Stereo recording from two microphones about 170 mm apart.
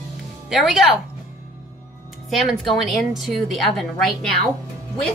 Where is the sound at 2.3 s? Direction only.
Centre (ahead or behind).